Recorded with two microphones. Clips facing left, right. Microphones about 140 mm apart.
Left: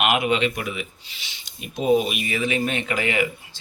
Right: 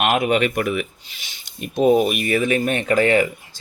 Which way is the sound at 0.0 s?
45° right (ahead or behind).